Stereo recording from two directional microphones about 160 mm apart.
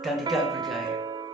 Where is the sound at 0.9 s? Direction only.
25° right (ahead or behind).